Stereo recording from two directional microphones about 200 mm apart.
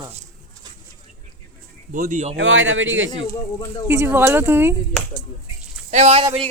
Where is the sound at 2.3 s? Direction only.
70° right (ahead or behind).